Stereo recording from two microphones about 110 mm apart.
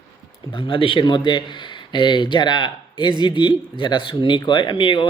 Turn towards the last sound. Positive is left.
turn(degrees=50)  # may be behind; listen again after turning